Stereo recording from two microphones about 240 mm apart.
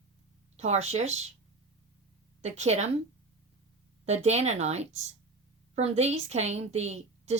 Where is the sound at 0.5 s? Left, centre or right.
Right.